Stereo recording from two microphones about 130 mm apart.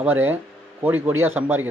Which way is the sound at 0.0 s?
15° right (ahead or behind).